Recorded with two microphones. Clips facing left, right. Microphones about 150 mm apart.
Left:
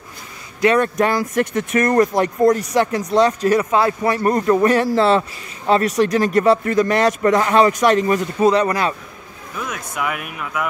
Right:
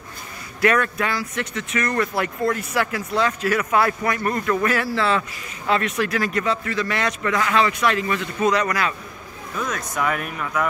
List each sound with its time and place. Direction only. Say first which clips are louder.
0.7 s a man's voice: left 6 dB; 45° left (ahead or behind)
9.6 s speech: right 1 dB; 10° left (ahead or behind)